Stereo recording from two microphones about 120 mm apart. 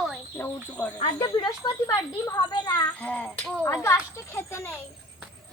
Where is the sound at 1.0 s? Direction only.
40° left (ahead or behind).